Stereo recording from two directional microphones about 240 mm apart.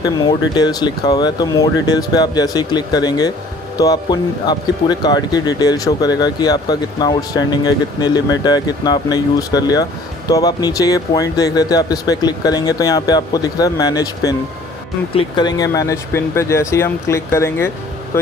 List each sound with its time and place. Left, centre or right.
0.0 s speech: centre